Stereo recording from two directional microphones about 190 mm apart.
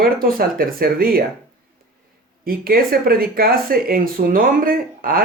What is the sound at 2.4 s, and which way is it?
Speech, 50° right (ahead or behind).